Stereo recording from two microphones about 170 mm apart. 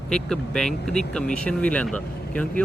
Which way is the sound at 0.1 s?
5° left (ahead or behind).